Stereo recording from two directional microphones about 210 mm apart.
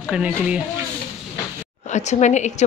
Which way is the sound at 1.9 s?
35° left (ahead or behind).